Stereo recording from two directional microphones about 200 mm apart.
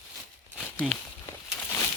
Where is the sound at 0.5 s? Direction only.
Centre (ahead or behind).